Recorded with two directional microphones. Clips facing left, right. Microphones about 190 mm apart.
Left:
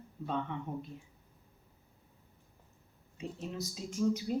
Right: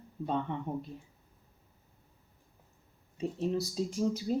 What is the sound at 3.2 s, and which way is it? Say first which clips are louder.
Speech: right 8 dB; 35° right (ahead or behind).